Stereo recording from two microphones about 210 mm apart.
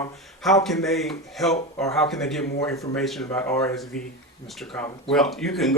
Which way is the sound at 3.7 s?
Centre (ahead or behind).